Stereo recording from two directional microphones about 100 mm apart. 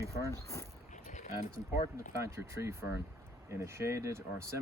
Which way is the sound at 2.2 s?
30° right (ahead or behind).